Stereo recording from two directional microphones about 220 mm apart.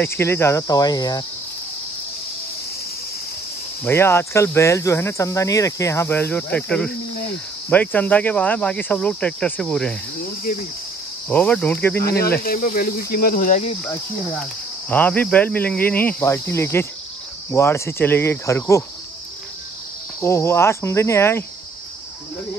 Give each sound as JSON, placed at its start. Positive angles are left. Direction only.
{"t": 0.0, "sound": "speech", "side_deg": 10}
{"t": 3.8, "sound": "speech", "side_deg": 10}
{"t": 7.7, "sound": "cricket", "side_deg": 10}
{"t": 10.2, "sound": "speech", "side_deg": 40}
{"t": 11.2, "sound": "speech", "side_deg": 5}
{"t": 12.0, "sound": "speech", "side_deg": 45}
{"t": 14.9, "sound": "speech", "side_deg": 5}
{"t": 20.2, "sound": "speech", "side_deg": 10}